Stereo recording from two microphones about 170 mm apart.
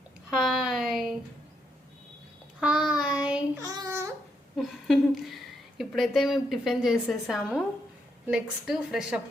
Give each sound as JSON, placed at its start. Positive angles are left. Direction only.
{"t": 0.3, "sound": "speech", "side_deg": 0}
{"t": 2.6, "sound": "child singing", "side_deg": -5}
{"t": 3.6, "sound": "babbling", "side_deg": -20}
{"t": 4.5, "sound": "a woman's voice", "side_deg": 0}